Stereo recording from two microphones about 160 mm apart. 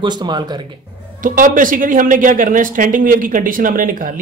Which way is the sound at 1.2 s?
55° right (ahead or behind).